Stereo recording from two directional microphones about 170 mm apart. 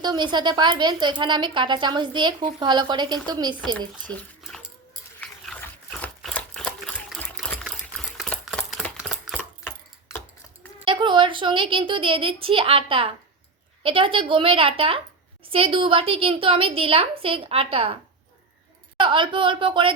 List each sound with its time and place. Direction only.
0.0 s a woman's voice: 25° right (ahead or behind)
4.1 s dog: 10° left (ahead or behind)
7.6 s typewriter: centre (ahead or behind)
10.8 s a woman's voice: 30° right (ahead or behind)
18.9 s a woman's voice: 30° right (ahead or behind)